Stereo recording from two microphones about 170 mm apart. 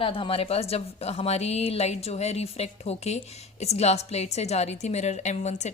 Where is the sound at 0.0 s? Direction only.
30° left (ahead or behind).